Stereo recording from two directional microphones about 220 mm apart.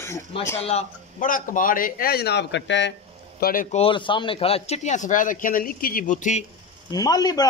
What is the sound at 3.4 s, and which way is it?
Speech, 40° left (ahead or behind).